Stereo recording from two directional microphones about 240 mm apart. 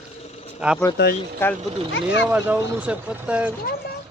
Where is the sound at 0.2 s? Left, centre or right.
Left.